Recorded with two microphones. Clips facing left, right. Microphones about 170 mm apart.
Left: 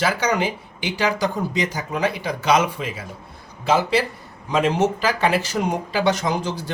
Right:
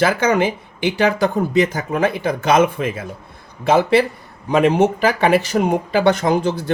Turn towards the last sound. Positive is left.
turn(degrees=-55)  # may be behind; listen again after turning